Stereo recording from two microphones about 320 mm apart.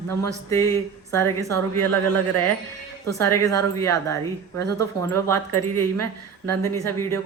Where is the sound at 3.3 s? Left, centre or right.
Centre.